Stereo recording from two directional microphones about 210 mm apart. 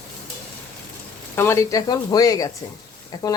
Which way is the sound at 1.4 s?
15° left (ahead or behind).